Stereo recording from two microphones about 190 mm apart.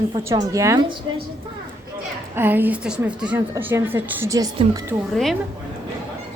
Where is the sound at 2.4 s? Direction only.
10° right (ahead or behind).